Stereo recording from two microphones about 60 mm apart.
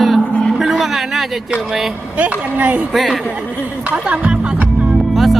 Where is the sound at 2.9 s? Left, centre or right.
Centre.